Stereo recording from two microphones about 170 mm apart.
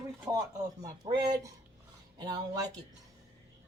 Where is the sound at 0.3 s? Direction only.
20° right (ahead or behind).